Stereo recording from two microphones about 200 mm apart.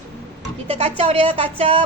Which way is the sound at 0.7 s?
30° right (ahead or behind).